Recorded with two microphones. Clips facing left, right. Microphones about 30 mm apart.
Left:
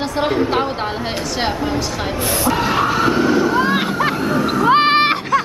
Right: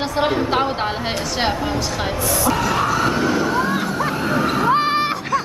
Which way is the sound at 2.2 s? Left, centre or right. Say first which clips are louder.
Left 3 dB; left.